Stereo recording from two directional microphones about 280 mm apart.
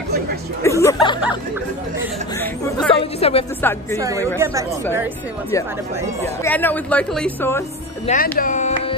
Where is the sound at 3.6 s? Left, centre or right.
Centre.